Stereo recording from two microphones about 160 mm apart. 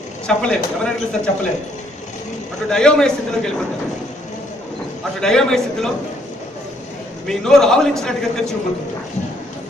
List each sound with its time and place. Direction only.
0.3 s a man's voice: 5° left (ahead or behind)
2.6 s a man's voice: 5° left (ahead or behind)
5.2 s a man's voice: 5° left (ahead or behind)
7.3 s a man's voice: 5° left (ahead or behind)